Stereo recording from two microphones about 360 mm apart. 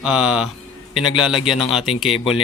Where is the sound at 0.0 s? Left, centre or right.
Centre.